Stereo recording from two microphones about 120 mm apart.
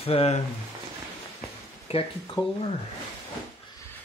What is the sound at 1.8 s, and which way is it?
Speech, 50° left (ahead or behind).